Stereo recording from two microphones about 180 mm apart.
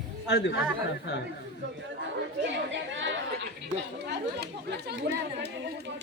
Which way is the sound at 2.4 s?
90° right.